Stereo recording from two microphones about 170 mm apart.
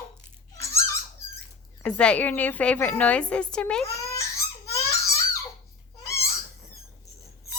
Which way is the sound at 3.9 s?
15° left (ahead or behind).